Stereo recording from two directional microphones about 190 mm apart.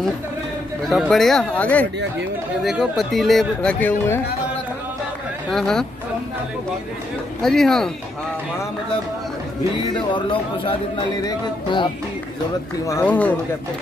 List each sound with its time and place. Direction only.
0.8 s speech: centre (ahead or behind)
5.5 s speech: centre (ahead or behind)
7.4 s speech: centre (ahead or behind)
10.1 s speech: 25° left (ahead or behind)
12.8 s speech: 15° left (ahead or behind)